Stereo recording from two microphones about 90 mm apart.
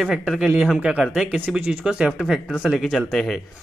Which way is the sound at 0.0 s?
5° right (ahead or behind).